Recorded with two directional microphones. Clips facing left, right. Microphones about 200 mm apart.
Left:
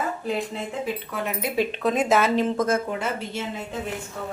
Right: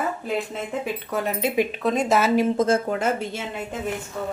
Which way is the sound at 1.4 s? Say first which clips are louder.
Right 2 dB; 20° right (ahead or behind).